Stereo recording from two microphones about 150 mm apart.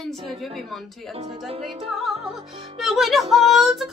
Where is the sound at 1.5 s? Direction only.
40° right (ahead or behind).